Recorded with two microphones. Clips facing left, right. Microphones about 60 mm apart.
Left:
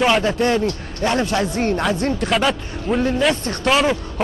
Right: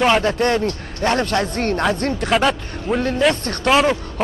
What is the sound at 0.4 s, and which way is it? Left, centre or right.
Speech, right.